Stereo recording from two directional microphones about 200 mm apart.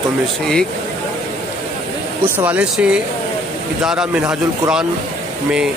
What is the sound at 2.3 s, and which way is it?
Speech, 5° right (ahead or behind).